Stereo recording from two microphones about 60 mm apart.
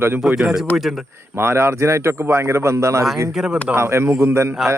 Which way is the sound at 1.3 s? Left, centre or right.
Right.